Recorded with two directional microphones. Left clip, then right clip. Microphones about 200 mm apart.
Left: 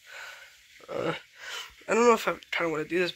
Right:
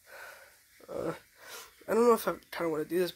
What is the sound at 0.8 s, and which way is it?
Speech, 5° right (ahead or behind).